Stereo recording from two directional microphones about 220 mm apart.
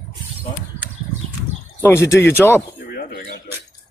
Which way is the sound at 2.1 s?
10° left (ahead or behind).